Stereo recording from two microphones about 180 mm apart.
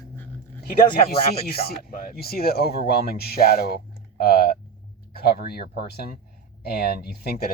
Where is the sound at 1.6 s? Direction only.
55° left (ahead or behind).